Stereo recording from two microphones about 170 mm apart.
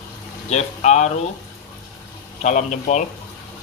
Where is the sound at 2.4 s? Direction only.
45° left (ahead or behind).